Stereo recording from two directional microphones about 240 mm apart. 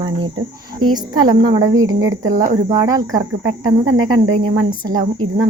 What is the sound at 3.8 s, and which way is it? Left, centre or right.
Speech, right.